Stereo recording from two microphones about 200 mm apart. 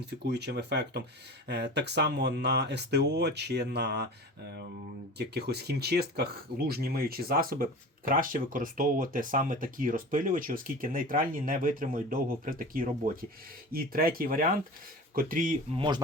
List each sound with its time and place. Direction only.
0.0 s speech: 55° right (ahead or behind)
15.7 s speech: 25° right (ahead or behind)